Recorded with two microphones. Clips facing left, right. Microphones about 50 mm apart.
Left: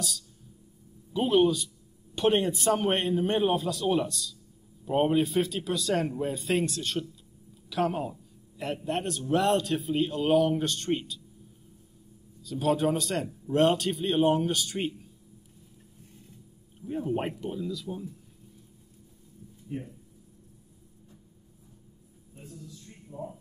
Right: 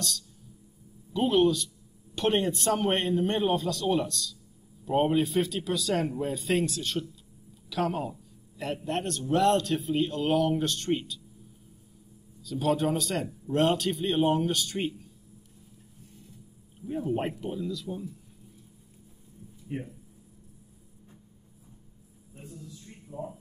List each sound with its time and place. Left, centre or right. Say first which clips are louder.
1.1 s a man's voice: even; centre
12.4 s a man's voice: left 1 dB; centre
16.8 s a man's voice: even; centre
19.7 s speech: right 1 dB; right